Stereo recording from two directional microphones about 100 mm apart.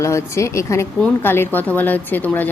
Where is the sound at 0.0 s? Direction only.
30° left (ahead or behind).